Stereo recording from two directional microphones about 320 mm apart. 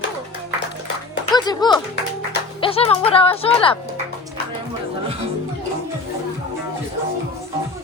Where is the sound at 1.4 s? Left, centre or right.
Centre.